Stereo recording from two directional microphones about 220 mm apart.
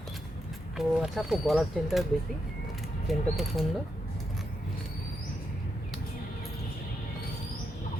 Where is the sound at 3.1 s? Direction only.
Centre (ahead or behind).